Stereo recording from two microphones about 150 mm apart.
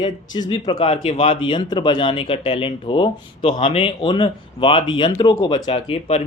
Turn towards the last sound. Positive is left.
turn(degrees=40)  # may be behind; listen again after turning